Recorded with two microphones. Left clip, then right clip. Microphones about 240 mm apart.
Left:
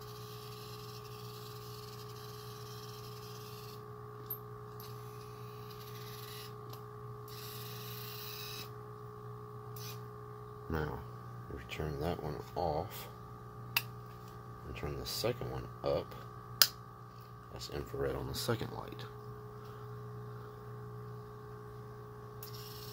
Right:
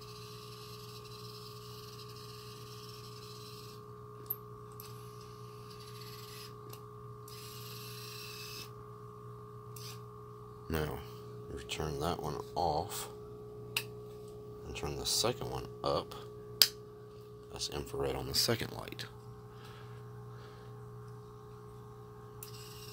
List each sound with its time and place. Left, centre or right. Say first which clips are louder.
10.7 s a sound: right 2 dB; centre
11.5 s speech: right 3 dB; centre
14.7 s speech: right 5 dB; centre
17.6 s speech: right 2 dB; centre